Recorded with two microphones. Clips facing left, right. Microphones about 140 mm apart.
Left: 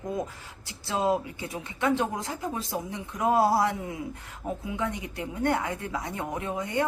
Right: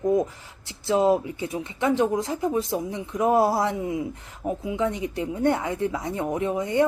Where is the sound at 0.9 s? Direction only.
25° right (ahead or behind).